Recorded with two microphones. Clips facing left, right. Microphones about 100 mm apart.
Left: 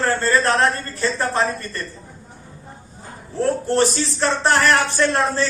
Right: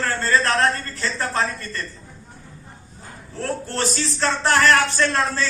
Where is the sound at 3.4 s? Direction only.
20° left (ahead or behind).